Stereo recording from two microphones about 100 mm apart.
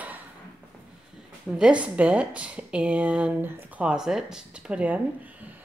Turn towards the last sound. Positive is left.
turn(degrees=-10)  # may be behind; listen again after turning